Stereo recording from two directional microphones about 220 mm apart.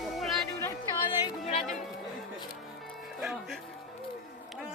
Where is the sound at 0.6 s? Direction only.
15° left (ahead or behind).